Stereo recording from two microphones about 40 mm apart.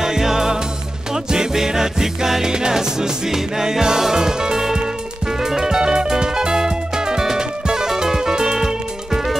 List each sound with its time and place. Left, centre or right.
0.0 s music: centre